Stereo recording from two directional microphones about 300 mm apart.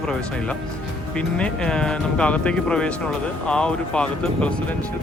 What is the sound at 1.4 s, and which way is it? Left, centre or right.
Speech, centre.